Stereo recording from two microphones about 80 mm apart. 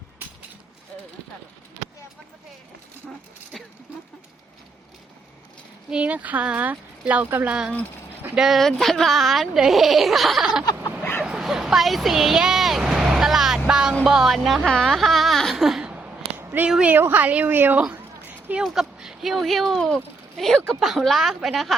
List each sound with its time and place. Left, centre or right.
0.2 s a sound: right
3.5 s speech: centre
5.9 s speech: centre
8.4 s speech: centre
11.2 s bow-wow: centre
13.7 s a sound: centre
14.0 s speech: centre
15.8 s a sound: centre
16.6 s speech: centre
16.9 s a woman's voice: right
18.3 s a sound: right
18.6 s speech: centre